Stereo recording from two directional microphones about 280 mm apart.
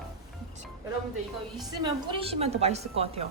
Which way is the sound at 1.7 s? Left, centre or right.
Centre.